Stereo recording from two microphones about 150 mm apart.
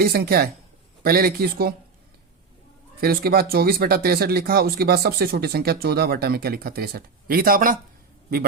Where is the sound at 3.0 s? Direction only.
90° right.